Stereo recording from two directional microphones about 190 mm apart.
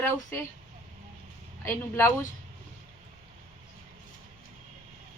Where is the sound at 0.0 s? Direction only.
15° left (ahead or behind).